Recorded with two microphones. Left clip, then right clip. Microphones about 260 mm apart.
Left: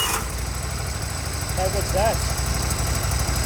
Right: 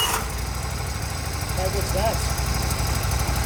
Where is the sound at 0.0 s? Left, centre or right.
Centre.